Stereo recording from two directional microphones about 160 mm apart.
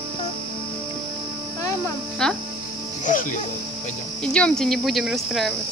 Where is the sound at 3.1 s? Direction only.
55° left (ahead or behind).